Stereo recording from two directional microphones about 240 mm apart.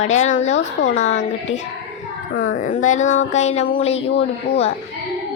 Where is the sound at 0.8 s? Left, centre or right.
Left.